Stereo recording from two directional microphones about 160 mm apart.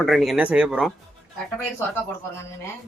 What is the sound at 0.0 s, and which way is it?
Speech, centre (ahead or behind).